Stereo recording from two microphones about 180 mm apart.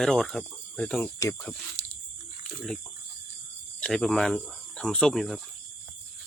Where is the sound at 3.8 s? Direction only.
5° left (ahead or behind).